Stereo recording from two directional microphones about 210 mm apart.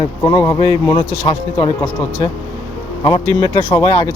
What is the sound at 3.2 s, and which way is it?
Speech, 20° right (ahead or behind).